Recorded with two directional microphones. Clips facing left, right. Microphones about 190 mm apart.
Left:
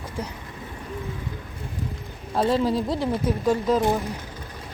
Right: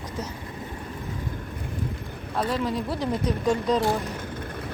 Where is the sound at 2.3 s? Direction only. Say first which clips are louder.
Left 5 dB; 30° left (ahead or behind).